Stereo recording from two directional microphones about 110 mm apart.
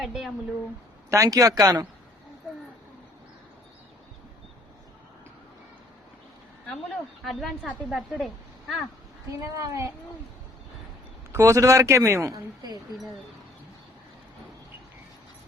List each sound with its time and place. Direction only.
0.0 s speech: 5° right (ahead or behind)
1.1 s speech: 30° right (ahead or behind)
6.7 s speech: centre (ahead or behind)
9.4 s speech: 30° right (ahead or behind)
11.3 s speech: 25° right (ahead or behind)